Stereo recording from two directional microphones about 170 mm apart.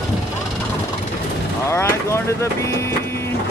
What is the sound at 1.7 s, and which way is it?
Vehicle, 15° left (ahead or behind).